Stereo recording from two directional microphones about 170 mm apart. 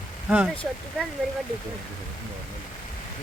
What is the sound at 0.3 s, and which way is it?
Speech, 5° right (ahead or behind).